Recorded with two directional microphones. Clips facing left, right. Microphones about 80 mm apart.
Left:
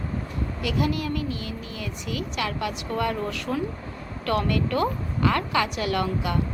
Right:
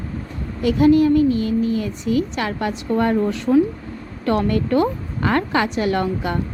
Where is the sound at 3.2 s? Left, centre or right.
Right.